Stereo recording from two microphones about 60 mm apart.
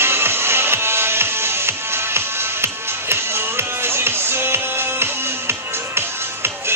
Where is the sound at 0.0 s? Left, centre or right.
Right.